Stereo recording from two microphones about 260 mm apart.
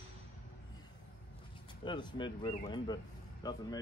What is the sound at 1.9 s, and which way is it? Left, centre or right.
Speech, centre.